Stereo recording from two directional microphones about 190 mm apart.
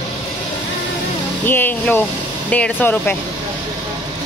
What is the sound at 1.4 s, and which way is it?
Speech, 10° left (ahead or behind).